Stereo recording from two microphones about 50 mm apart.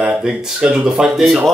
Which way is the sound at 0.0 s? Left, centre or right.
Centre.